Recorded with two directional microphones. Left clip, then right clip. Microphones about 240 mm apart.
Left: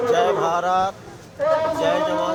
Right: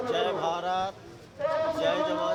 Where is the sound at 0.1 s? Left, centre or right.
Centre.